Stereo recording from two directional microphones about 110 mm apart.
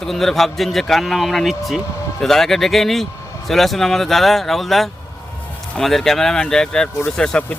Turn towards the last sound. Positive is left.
turn(degrees=5)  # may be behind; listen again after turning